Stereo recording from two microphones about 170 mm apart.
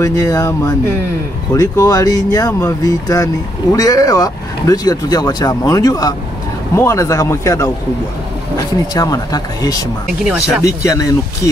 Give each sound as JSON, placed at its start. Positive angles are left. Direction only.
{"t": 0.0, "sound": "a man's voice", "side_deg": 20}
{"t": 8.9, "sound": "speech", "side_deg": 20}
{"t": 10.2, "sound": "speech", "side_deg": -5}
{"t": 10.6, "sound": "speech", "side_deg": 20}